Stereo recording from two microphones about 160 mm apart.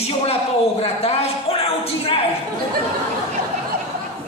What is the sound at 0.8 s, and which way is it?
A man's voice, 40° left (ahead or behind).